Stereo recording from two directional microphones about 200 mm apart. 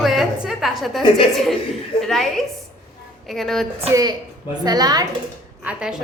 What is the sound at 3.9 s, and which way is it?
A woman's voice, 20° right (ahead or behind).